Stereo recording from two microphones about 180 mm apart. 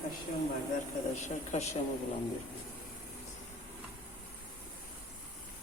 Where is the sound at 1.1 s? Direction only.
40° left (ahead or behind).